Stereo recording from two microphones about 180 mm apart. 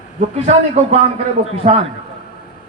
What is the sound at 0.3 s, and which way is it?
Speech, 40° right (ahead or behind).